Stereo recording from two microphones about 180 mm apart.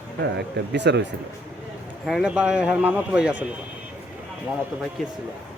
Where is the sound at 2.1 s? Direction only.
5° right (ahead or behind).